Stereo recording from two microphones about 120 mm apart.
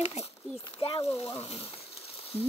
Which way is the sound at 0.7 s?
40° left (ahead or behind).